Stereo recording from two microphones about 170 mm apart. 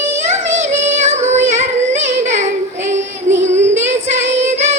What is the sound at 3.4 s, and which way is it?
Child singing, 45° right (ahead or behind).